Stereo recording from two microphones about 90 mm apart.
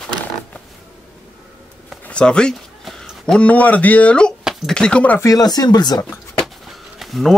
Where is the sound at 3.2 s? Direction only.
10° left (ahead or behind).